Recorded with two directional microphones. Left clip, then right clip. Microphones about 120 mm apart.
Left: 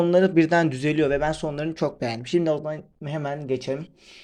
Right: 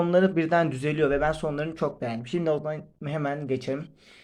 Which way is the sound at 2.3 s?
40° left (ahead or behind).